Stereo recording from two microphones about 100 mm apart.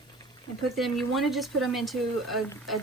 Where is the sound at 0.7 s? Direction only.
Centre (ahead or behind).